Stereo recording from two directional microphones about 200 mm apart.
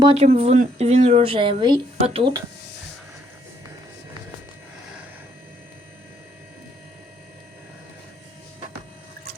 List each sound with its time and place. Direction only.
0.0 s a woman's voice: 30° right (ahead or behind)